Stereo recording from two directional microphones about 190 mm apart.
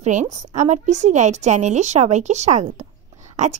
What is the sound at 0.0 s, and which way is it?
A woman's voice, 40° right (ahead or behind).